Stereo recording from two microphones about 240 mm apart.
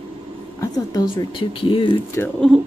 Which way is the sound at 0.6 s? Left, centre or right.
Centre.